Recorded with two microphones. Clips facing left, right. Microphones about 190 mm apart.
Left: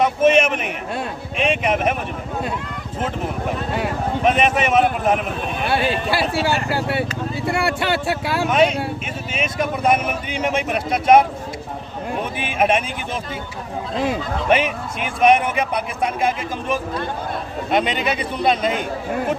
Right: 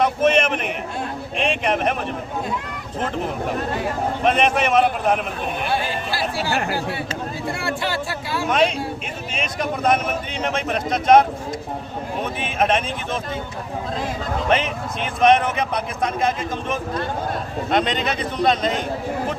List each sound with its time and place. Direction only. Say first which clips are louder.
0.0 s a sound: left 2 dB; 5° left (ahead or behind)
1.4 s a man's voice: left 2 dB; 5° left (ahead or behind)
4.2 s a man's voice: left 1 dB; 5° left (ahead or behind)
5.6 s speech: left 6 dB; 70° left (ahead or behind)
8.4 s a man's voice: left 2 dB; 5° left (ahead or behind)
12.4 s a man's voice: left 2 dB; 10° left (ahead or behind)
14.5 s a man's voice: left 4 dB; 10° left (ahead or behind)